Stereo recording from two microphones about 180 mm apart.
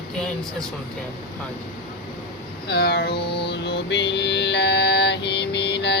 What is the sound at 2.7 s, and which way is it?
Mantra, 60° left (ahead or behind).